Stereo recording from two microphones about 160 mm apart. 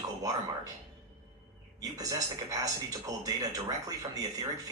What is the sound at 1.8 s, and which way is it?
Speech, 20° right (ahead or behind).